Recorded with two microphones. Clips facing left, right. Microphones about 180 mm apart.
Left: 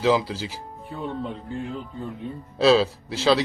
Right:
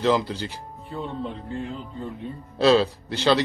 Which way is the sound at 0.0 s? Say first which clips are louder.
Left 1 dB; 5° left (ahead or behind).